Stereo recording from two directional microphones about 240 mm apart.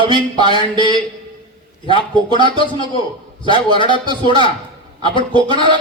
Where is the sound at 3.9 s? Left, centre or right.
Centre.